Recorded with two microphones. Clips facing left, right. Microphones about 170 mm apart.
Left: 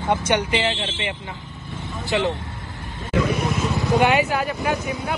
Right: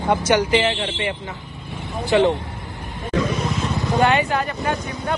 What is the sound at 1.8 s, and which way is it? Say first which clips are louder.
Vehicle: right 5 dB; 20° right (ahead or behind).